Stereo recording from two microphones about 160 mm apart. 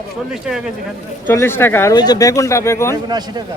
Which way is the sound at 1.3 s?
15° left (ahead or behind).